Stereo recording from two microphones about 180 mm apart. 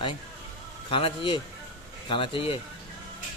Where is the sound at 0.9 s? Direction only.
30° left (ahead or behind).